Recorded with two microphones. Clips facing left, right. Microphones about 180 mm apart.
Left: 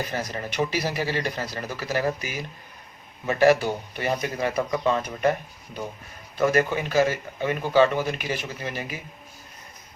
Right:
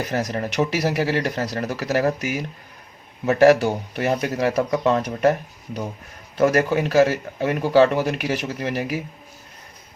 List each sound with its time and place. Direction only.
0.1 s speech: 80° right
6.3 s speech: 75° right (ahead or behind)